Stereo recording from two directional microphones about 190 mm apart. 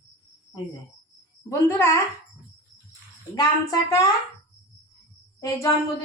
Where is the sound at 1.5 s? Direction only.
15° left (ahead or behind).